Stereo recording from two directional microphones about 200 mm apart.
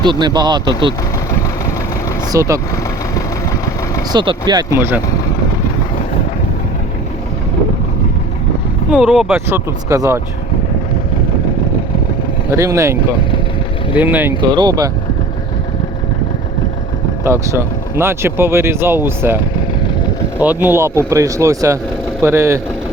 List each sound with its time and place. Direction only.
0.0 s speech: 20° right (ahead or behind)
2.3 s speech: 15° right (ahead or behind)
4.1 s speech: 20° right (ahead or behind)
8.9 s speech: 5° right (ahead or behind)
12.5 s speech: 15° right (ahead or behind)
14.4 s speech: 20° right (ahead or behind)
17.2 s speech: 15° right (ahead or behind)
20.4 s speech: 10° right (ahead or behind)